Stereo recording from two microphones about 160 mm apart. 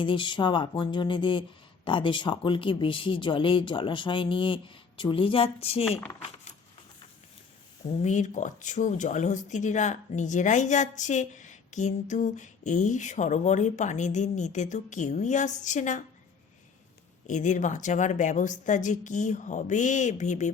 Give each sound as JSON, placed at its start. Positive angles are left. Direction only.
{"t": 0.0, "sound": "speech", "side_deg": 30}
{"t": 6.2, "sound": "coin", "side_deg": 50}
{"t": 7.9, "sound": "speech", "side_deg": 45}
{"t": 17.2, "sound": "speech", "side_deg": 50}